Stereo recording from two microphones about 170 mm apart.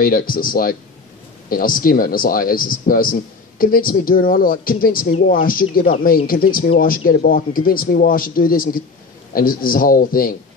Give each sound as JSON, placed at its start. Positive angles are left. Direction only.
{"t": 0.0, "sound": "a man's voice", "side_deg": 55}